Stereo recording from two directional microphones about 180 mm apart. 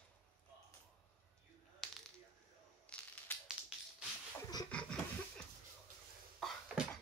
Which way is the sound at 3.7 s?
5° right (ahead or behind).